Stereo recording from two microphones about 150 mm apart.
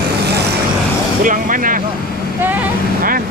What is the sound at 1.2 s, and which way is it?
Speech, 65° right (ahead or behind).